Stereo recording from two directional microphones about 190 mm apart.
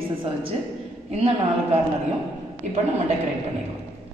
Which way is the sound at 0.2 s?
30° right (ahead or behind).